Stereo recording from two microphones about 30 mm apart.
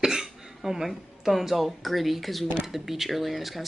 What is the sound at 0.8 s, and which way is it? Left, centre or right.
A woman's voice, centre.